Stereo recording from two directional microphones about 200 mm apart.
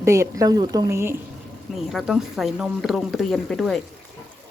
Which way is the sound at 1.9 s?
Centre (ahead or behind).